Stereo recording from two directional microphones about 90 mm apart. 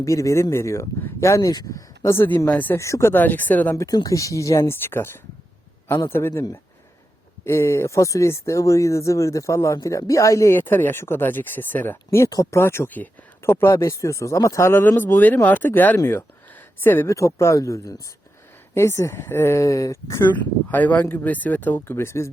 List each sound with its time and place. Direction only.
0.0 s speech: 35° left (ahead or behind)
2.0 s speech: 25° left (ahead or behind)
2.7 s speech: 35° left (ahead or behind)
3.1 s speech: 20° left (ahead or behind)
3.8 s speech: 45° left (ahead or behind); by 6.4 s 25° left (ahead or behind)
7.4 s speech: 30° left (ahead or behind)
20.2 s speech: 20° left (ahead or behind)